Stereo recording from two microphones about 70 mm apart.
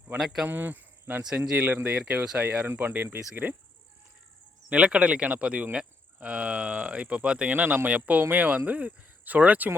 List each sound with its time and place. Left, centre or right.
0.2 s speech: centre
0.4 s cricket: right
1.4 s speech: right
4.7 s speech: centre